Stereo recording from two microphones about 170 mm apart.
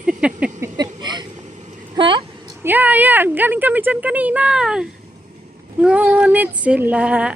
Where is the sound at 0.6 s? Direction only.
25° right (ahead or behind).